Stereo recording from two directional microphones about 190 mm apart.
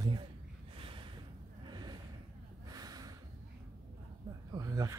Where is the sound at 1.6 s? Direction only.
25° right (ahead or behind).